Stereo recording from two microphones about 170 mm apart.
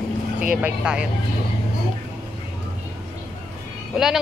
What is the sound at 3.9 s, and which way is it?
Speech, centre (ahead or behind).